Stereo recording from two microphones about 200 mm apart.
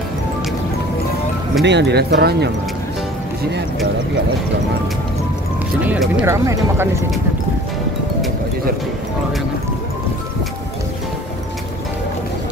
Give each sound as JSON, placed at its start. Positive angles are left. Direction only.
{"t": 1.6, "sound": "speech", "side_deg": -60}
{"t": 5.9, "sound": "speech", "side_deg": -5}